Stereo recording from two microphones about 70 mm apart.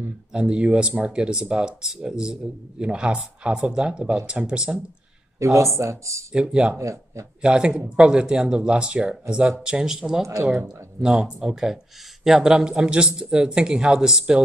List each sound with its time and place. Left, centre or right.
0.3 s speech: centre
5.4 s speech: right
6.3 s speech: centre
6.8 s speech: right
7.4 s speech: centre
10.2 s speech: right
11.0 s speech: centre